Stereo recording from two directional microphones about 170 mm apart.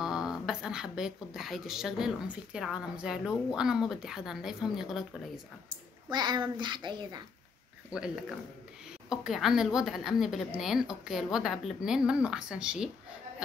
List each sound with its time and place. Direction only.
0.0 s speech: 5° right (ahead or behind)
6.0 s a child's voice: 25° right (ahead or behind)
7.9 s a woman's voice: 5° right (ahead or behind)